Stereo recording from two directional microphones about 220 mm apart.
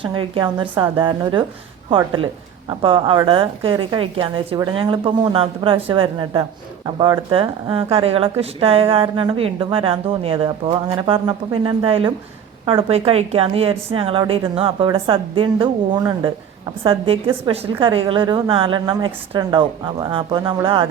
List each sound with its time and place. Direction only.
0.0 s speech: 20° right (ahead or behind)